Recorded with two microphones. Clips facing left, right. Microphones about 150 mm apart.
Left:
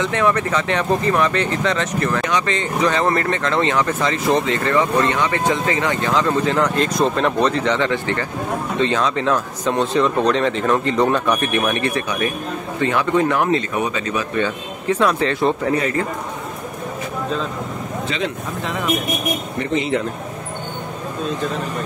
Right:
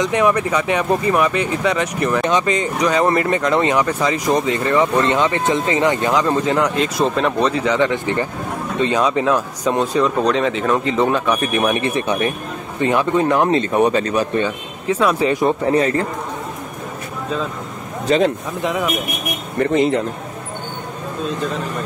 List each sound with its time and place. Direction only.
0.0 s speech: 15° right (ahead or behind)
11.5 s speech: 15° right (ahead or behind); by 14.4 s 35° right (ahead or behind)
14.4 s speech: 10° right (ahead or behind)
15.6 s a man's voice: 30° right (ahead or behind)
18.0 s speech: 40° right (ahead or behind)
19.7 s a man's voice: 40° right (ahead or behind)